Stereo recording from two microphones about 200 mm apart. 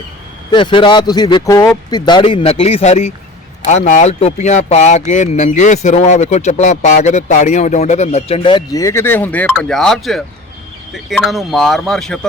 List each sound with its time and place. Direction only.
0.5 s speech: 25° left (ahead or behind); by 12.2 s centre (ahead or behind)